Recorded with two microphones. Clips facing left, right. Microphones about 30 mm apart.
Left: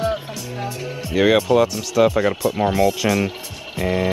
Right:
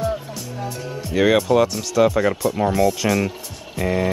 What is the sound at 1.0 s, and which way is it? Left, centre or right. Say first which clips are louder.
Speech: left 1 dB; centre.